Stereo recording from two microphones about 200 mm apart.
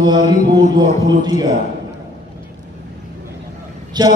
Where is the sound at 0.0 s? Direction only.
20° right (ahead or behind).